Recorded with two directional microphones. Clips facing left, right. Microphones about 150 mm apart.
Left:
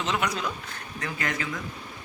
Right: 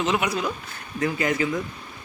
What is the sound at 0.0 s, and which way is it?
A man's voice, 10° right (ahead or behind).